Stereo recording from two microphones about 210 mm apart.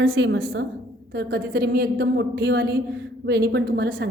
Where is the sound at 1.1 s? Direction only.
50° right (ahead or behind).